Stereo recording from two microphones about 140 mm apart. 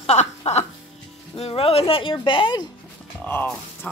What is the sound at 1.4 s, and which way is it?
Speech, 45° left (ahead or behind).